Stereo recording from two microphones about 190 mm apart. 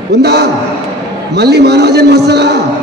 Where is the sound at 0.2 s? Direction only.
60° right (ahead or behind).